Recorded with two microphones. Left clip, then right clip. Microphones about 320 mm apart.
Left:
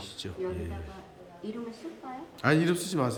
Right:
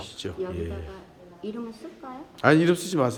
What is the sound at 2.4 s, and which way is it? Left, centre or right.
Speech, centre.